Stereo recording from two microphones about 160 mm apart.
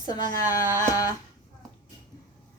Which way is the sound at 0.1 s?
25° left (ahead or behind).